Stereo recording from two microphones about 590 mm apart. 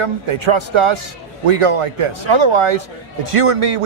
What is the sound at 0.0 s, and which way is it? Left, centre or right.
A man's voice, right.